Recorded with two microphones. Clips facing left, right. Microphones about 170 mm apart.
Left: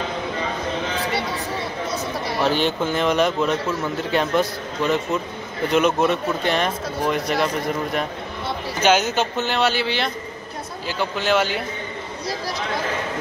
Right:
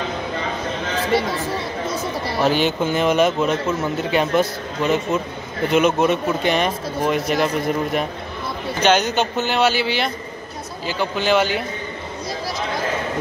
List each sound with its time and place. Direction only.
2.5 s speech: 5° right (ahead or behind)
8.8 s speech: 5° left (ahead or behind)